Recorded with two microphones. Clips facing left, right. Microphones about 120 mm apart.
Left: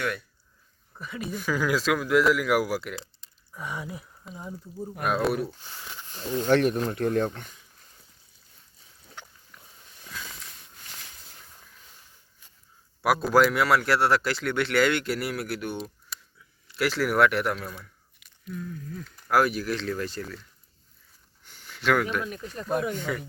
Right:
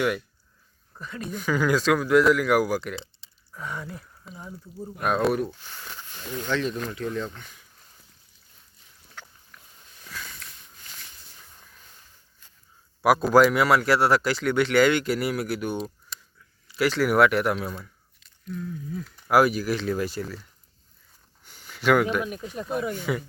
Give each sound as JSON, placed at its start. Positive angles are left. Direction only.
{"t": 0.9, "sound": "a man's voice", "side_deg": 5}
{"t": 6.1, "sound": "speech", "side_deg": 30}
{"t": 6.5, "sound": "speech", "side_deg": 55}
{"t": 9.2, "sound": "pig", "side_deg": 20}
{"t": 13.0, "sound": "a man's voice", "side_deg": 0}
{"t": 21.4, "sound": "a sound", "side_deg": -5}
{"t": 22.1, "sound": "speech", "side_deg": -15}